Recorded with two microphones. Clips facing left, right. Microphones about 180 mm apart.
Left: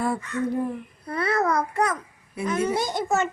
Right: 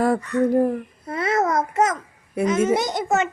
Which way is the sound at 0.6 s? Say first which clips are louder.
Right 7 dB; 45° right (ahead or behind).